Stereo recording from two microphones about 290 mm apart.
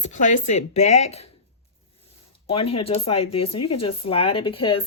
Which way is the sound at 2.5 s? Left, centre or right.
Centre.